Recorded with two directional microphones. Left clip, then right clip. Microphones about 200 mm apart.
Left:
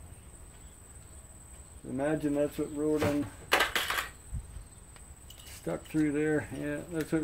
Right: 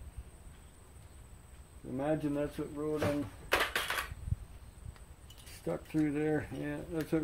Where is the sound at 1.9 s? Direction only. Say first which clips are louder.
Left 4 dB; 5° right (ahead or behind).